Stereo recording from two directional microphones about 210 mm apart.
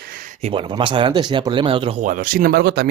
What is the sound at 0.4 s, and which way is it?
Speech, 25° right (ahead or behind).